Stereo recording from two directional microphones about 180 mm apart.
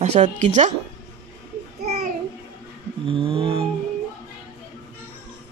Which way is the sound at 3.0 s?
30° right (ahead or behind).